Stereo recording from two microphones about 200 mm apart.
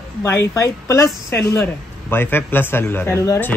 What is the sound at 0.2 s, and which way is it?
Speech, 15° left (ahead or behind).